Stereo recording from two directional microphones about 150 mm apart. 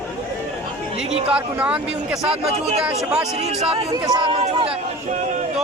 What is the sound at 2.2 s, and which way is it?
Speech, 45° right (ahead or behind).